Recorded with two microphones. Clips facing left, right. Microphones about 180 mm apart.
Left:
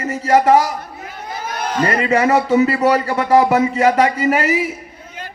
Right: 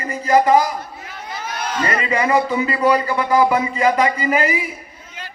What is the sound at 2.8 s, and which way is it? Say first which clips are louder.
Speech: left 1 dB; 75° left (ahead or behind).